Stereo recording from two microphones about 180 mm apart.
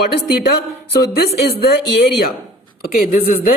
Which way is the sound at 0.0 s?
65° left (ahead or behind).